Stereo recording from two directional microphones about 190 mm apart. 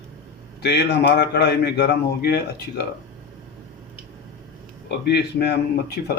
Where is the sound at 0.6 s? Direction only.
60° left (ahead or behind).